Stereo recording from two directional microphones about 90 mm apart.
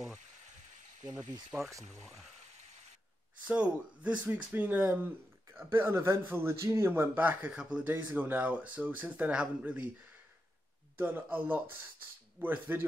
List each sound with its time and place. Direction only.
1.5 s speech: 15° right (ahead or behind)
3.4 s speech: 15° right (ahead or behind)
7.2 s speech: 15° right (ahead or behind)
11.0 s speech: 25° right (ahead or behind)